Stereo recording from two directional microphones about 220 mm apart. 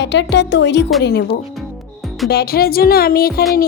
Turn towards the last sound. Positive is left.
turn(degrees=45)  # may be behind; listen again after turning